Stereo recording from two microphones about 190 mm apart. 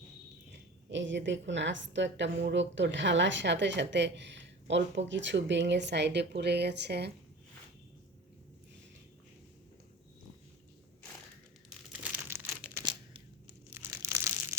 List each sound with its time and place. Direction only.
0.9 s a woman's voice: 70° right (ahead or behind)
11.9 s crumpling: 10° right (ahead or behind)
12.8 s a sound: 25° right (ahead or behind)
13.7 s crumpling: 15° right (ahead or behind)